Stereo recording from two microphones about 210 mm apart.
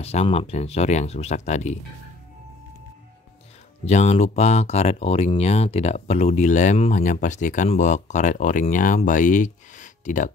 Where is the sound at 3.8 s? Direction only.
30° left (ahead or behind).